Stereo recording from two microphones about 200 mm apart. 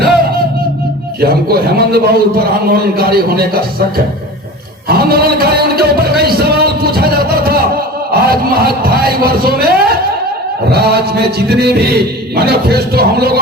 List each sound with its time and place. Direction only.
1.2 s a man's voice: 50° right (ahead or behind)